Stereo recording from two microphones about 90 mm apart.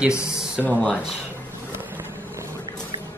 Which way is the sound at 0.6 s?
20° left (ahead or behind).